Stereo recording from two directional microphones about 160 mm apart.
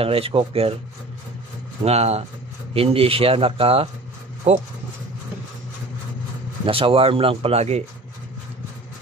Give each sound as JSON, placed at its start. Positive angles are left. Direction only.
{"t": 0.0, "sound": "speech", "side_deg": -35}
{"t": 1.8, "sound": "speech", "side_deg": -40}
{"t": 6.6, "sound": "speech", "side_deg": -35}